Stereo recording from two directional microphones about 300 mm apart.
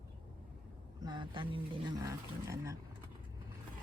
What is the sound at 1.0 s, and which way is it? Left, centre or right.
Speech, centre.